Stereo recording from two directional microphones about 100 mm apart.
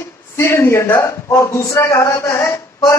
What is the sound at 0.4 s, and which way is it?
A man's voice, 30° left (ahead or behind).